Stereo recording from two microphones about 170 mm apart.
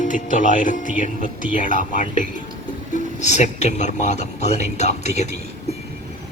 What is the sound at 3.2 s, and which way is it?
Speech, 45° left (ahead or behind).